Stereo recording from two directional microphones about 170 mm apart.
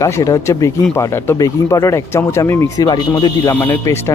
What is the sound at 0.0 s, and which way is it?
Speech, 20° left (ahead or behind).